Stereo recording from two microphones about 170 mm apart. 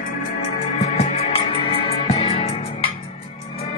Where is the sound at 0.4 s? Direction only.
40° left (ahead or behind).